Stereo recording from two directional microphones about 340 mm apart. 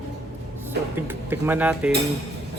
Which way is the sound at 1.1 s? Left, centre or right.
Centre.